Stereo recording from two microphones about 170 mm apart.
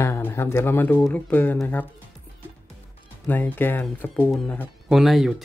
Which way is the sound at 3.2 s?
10° left (ahead or behind).